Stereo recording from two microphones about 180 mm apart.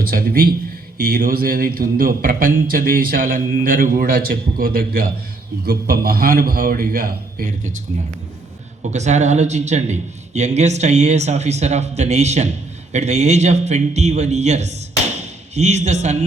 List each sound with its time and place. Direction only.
0.1 s a man's voice: 55° right (ahead or behind)
8.9 s a man's voice: 40° right (ahead or behind)